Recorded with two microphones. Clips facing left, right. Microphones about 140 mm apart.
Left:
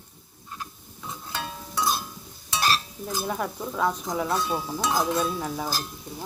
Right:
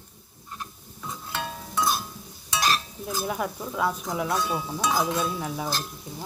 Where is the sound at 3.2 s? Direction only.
5° right (ahead or behind).